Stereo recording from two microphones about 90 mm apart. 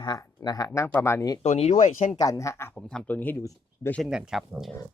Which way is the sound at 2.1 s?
40° left (ahead or behind).